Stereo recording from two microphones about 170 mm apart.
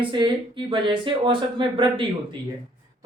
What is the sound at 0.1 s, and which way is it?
Speech, 30° right (ahead or behind).